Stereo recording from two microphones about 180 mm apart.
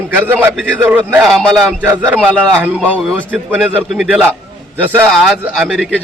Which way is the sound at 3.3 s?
5° right (ahead or behind).